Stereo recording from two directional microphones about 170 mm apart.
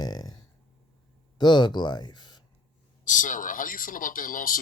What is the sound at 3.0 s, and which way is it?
Speech, 50° left (ahead or behind).